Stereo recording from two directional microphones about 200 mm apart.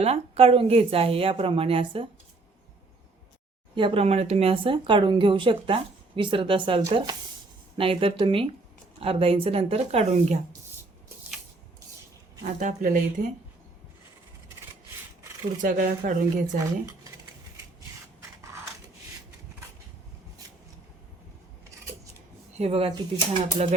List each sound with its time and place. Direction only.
0.0 s speech: 30° right (ahead or behind)
3.8 s speech: 25° right (ahead or behind)
12.5 s speech: 40° right (ahead or behind)
15.6 s speech: 45° right (ahead or behind)
22.5 s speech: 30° right (ahead or behind)